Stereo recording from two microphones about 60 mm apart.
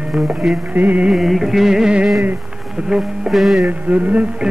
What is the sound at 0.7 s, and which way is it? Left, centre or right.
Music, right.